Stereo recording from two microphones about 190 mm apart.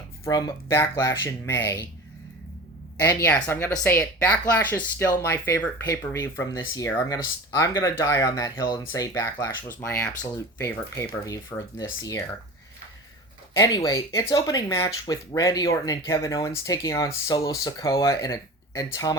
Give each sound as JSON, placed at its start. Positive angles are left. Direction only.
{"t": 0.3, "sound": "speech", "side_deg": 20}
{"t": 3.0, "sound": "speech", "side_deg": 15}
{"t": 13.6, "sound": "speech", "side_deg": 20}